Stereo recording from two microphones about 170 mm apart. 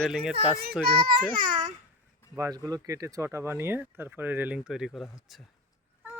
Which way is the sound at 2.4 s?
20° right (ahead or behind).